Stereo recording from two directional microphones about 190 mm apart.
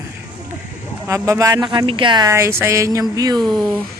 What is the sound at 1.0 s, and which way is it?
Speech, 15° right (ahead or behind).